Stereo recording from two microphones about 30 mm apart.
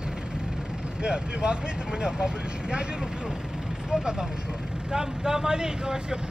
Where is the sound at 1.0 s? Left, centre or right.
Right.